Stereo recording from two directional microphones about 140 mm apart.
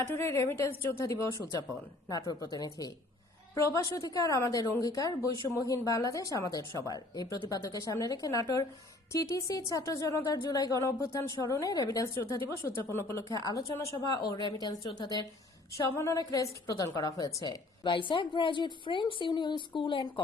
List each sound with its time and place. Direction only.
0.0 s speech: 20° left (ahead or behind)
2.4 s a woman's voice: 25° left (ahead or behind)